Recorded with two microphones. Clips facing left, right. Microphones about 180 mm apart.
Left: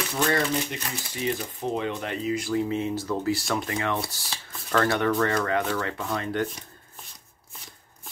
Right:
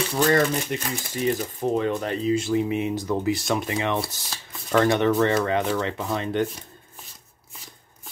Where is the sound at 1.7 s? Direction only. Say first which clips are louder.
Right 5 dB; 40° right (ahead or behind).